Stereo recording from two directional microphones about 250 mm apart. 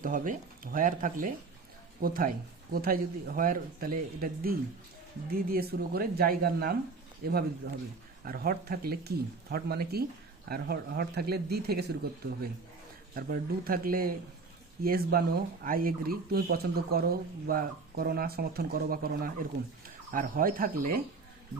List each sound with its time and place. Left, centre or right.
0.0 s speech: right
13.1 s speech: right